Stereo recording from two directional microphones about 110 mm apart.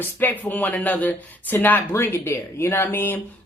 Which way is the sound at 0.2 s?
15° left (ahead or behind).